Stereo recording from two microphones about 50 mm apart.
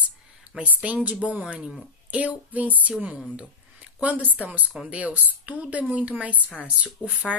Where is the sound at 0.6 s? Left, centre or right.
Right.